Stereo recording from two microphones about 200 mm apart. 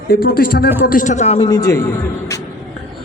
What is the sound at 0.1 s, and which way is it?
A man's voice, 50° left (ahead or behind).